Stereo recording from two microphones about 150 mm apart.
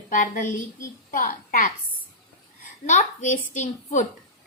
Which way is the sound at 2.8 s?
50° left (ahead or behind).